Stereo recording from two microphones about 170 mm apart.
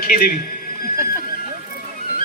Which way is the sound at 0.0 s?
60° left (ahead or behind).